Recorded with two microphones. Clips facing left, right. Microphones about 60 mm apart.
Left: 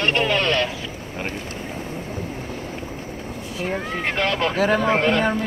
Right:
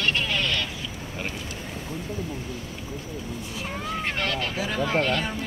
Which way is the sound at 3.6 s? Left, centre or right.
Left.